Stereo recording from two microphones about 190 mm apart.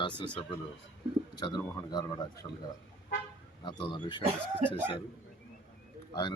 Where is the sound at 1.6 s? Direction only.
10° left (ahead or behind).